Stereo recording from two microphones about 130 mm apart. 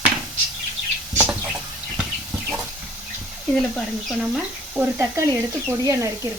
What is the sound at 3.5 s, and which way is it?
Speech, 5° left (ahead or behind).